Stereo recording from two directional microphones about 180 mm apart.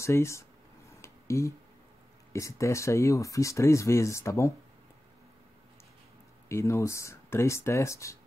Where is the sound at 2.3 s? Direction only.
15° left (ahead or behind).